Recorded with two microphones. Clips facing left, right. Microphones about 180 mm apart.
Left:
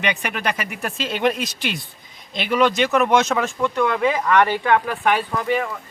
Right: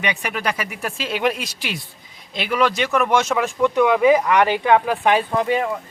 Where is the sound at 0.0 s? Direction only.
5° right (ahead or behind); by 5.6 s 20° right (ahead or behind).